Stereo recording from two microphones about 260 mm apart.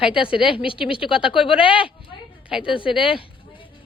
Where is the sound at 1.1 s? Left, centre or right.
Centre.